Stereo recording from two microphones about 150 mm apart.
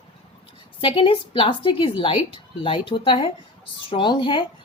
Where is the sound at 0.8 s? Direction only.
35° left (ahead or behind).